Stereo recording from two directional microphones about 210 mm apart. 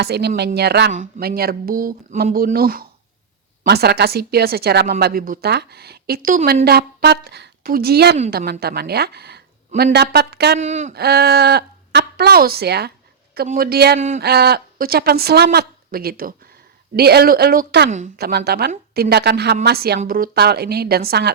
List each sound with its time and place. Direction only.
0.0 s a woman's voice: 50° right (ahead or behind)
10.6 s speech: 35° right (ahead or behind)
10.9 s a woman's voice: 50° right (ahead or behind)